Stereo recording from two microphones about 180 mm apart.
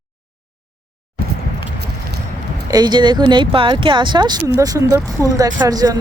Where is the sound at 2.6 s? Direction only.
20° right (ahead or behind).